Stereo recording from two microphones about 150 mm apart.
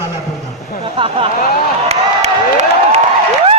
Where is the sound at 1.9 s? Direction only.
45° right (ahead or behind).